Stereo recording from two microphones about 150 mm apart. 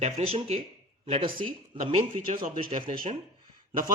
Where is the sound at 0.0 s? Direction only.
40° right (ahead or behind).